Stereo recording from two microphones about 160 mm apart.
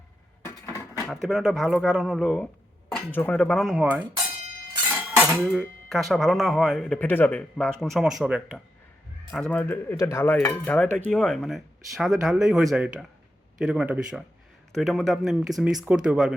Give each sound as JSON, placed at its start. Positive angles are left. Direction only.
{"t": 0.4, "sound": "dishes", "side_deg": 15}
{"t": 1.0, "sound": "speech", "side_deg": 0}
{"t": 2.9, "sound": "speech", "side_deg": 10}
{"t": 4.9, "sound": "cutlery", "side_deg": -5}
{"t": 5.5, "sound": "speech", "side_deg": 0}
{"t": 9.3, "sound": "a man's voice", "side_deg": 5}